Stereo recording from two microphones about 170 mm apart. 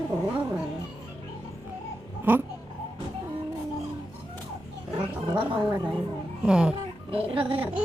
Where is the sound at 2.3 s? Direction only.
10° right (ahead or behind).